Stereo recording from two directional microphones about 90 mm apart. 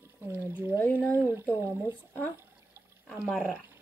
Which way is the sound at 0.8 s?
20° left (ahead or behind).